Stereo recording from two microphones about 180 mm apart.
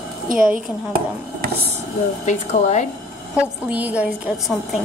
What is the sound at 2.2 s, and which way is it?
Speech, 40° left (ahead or behind).